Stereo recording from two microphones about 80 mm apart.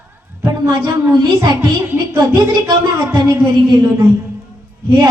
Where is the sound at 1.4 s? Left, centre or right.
Right.